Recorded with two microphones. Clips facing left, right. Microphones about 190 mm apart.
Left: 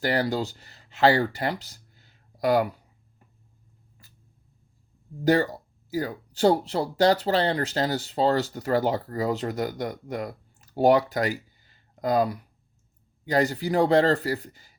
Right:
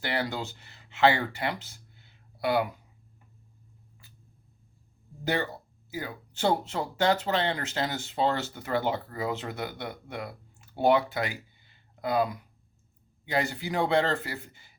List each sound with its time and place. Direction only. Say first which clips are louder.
0.0 s speech: left 6 dB; 40° left (ahead or behind)
5.2 s speech: left 8 dB; 40° left (ahead or behind)